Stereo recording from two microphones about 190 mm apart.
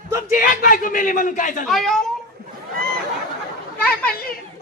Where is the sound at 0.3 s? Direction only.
45° left (ahead or behind).